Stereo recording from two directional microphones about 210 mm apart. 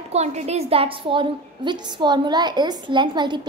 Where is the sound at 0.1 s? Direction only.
30° right (ahead or behind).